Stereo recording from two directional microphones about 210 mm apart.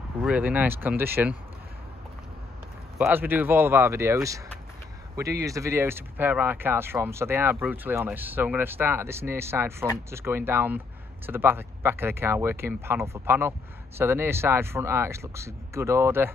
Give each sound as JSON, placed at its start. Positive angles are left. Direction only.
{"t": 0.2, "sound": "speech", "side_deg": -5}
{"t": 3.0, "sound": "speech", "side_deg": -10}